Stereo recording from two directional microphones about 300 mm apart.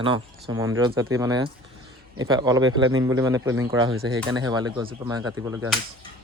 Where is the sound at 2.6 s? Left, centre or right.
Right.